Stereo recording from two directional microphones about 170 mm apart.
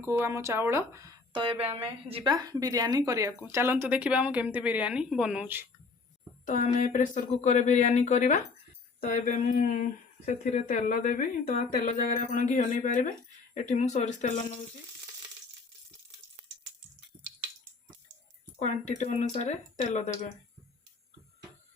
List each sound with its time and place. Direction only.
0.0 s speech: 15° right (ahead or behind)
1.3 s a woman's voice: 30° right (ahead or behind)
2.3 s speech: 20° right (ahead or behind)
6.4 s speech: 45° left (ahead or behind)
9.0 s speech: 60° left (ahead or behind)
18.6 s speech: 45° left (ahead or behind)